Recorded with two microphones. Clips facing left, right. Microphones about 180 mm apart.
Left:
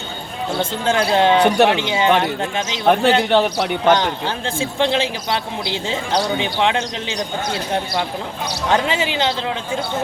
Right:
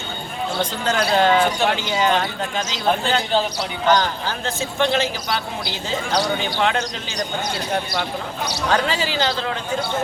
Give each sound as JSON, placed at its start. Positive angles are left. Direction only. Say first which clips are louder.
{"t": 0.6, "sound": "speech", "louder": "left 3 dB", "side_deg": 25}
{"t": 1.5, "sound": "speech", "louder": "left 6 dB", "side_deg": 70}
{"t": 1.8, "sound": "speech", "louder": "left 2 dB", "side_deg": 25}
{"t": 2.8, "sound": "a man's voice", "louder": "left 6 dB", "side_deg": 65}
{"t": 3.8, "sound": "speech", "louder": "left 1 dB", "side_deg": 25}
{"t": 8.7, "sound": "speech", "louder": "left 3 dB", "side_deg": 20}